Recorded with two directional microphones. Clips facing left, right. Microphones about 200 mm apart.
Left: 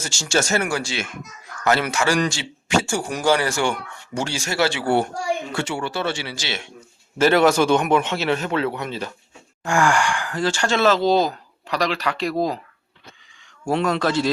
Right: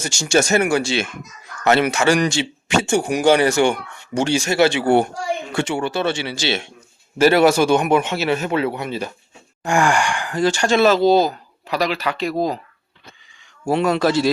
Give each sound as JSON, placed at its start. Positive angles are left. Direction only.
{"t": 0.0, "sound": "speech", "side_deg": -15}
{"t": 7.2, "sound": "speech", "side_deg": -10}
{"t": 13.7, "sound": "speech", "side_deg": -5}